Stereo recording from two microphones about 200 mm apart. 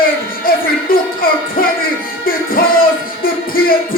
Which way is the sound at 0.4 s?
45° left (ahead or behind).